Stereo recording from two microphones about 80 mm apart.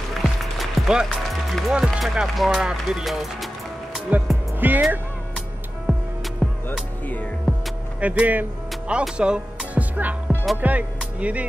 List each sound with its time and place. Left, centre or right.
0.6 s music: centre
1.7 s speech: centre
4.1 s music: centre
4.6 s speech: right
5.9 s music: centre
8.0 s speech: centre
9.1 s music: centre
9.9 s music: right
11.1 s speech: centre